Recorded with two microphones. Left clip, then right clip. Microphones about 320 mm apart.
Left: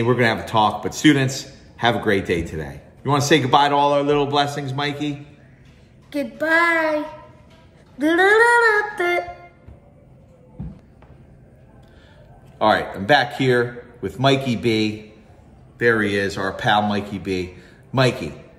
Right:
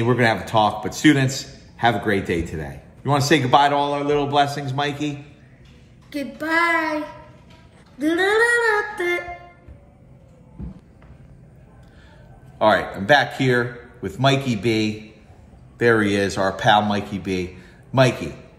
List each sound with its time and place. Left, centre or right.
0.0 s a man's voice: centre
6.0 s child singing: centre
8.0 s a sound: centre
12.5 s a man's voice: centre
15.8 s a man's voice: centre